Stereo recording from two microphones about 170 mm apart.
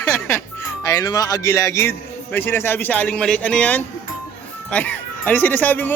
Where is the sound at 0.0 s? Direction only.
15° left (ahead or behind).